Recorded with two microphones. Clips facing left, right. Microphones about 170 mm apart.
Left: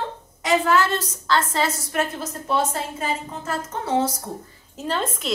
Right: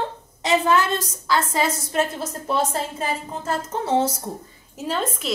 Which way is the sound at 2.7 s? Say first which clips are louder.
Right 1 dB; 30° right (ahead or behind).